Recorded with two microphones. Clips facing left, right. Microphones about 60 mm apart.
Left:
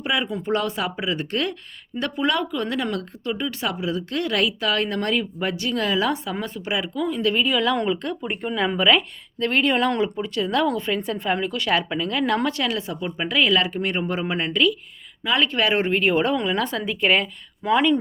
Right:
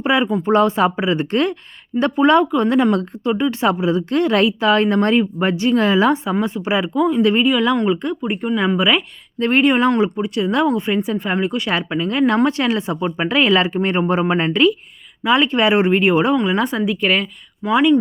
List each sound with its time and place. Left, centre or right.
0.0 s speech: right
6.3 s speech: centre
7.4 s speech: centre
9.4 s speech: right
15.2 s speech: right
16.9 s a woman's voice: centre
17.6 s speech: centre